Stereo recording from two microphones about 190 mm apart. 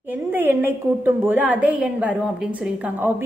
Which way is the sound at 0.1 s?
10° right (ahead or behind).